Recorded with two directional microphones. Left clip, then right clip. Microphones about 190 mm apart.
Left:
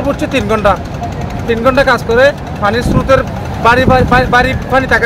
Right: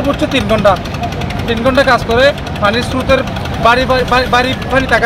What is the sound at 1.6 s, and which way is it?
Speech, 10° left (ahead or behind).